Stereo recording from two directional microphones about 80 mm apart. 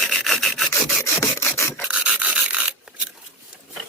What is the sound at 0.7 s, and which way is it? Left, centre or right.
Rub, left.